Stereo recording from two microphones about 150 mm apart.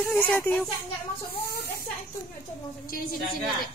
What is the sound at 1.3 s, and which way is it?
Speech, 90° left.